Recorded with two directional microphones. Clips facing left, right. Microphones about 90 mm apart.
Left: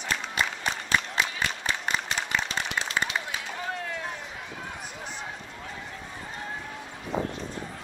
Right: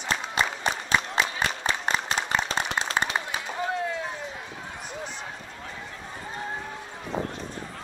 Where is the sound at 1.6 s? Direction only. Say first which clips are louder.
Right 3 dB; 35° right (ahead or behind).